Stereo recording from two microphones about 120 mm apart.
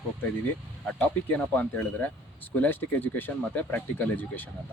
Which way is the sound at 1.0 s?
10° left (ahead or behind).